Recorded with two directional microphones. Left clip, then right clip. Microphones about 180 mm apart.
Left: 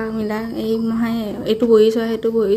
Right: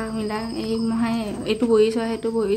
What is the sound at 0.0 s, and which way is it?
A woman's voice, 20° left (ahead or behind).